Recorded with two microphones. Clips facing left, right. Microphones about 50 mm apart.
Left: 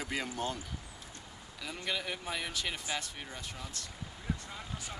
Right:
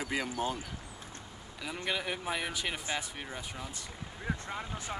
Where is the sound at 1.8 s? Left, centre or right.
Centre.